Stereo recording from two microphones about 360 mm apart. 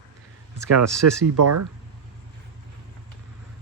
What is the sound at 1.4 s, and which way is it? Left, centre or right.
Speech, right.